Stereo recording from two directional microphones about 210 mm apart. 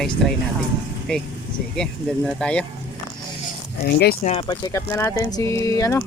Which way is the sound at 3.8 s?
50° left (ahead or behind).